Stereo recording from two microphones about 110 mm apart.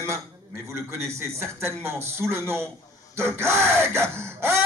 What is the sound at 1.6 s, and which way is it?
Speech, 25° right (ahead or behind).